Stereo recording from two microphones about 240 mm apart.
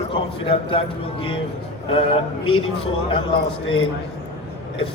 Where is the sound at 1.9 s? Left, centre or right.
Left.